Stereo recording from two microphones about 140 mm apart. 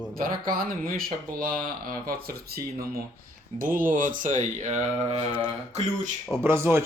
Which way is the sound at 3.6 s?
75° right (ahead or behind).